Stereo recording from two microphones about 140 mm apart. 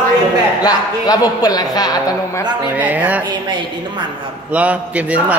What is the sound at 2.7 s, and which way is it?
Speech, 10° right (ahead or behind).